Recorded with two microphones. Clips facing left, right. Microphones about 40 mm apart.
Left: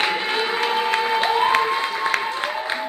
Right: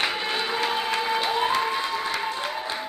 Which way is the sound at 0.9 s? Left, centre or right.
Left.